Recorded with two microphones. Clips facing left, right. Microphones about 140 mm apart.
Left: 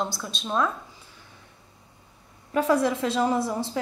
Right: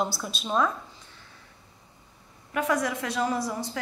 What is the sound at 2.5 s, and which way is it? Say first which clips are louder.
A woman's voice: left 5 dB; 30° left (ahead or behind).